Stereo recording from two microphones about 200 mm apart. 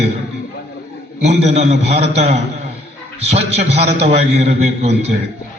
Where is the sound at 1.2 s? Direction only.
30° right (ahead or behind).